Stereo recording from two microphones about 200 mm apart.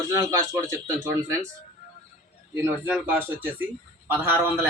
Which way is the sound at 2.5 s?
10° right (ahead or behind).